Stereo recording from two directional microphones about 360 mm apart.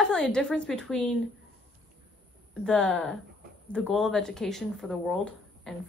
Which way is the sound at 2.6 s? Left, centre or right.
Centre.